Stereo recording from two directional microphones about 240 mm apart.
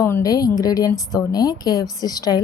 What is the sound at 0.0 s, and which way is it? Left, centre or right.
Speech, centre.